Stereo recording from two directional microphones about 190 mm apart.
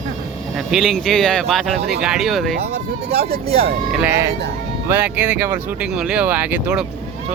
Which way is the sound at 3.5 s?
30° right (ahead or behind).